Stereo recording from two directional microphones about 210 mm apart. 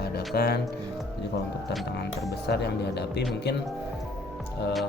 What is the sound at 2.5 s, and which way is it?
Speech, 50° left (ahead or behind).